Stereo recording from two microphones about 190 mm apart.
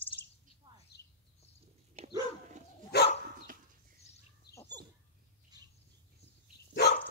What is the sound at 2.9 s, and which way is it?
Dog, 60° left (ahead or behind).